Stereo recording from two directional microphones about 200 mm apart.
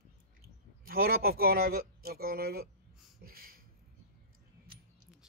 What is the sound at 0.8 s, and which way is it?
Speech, 45° right (ahead or behind).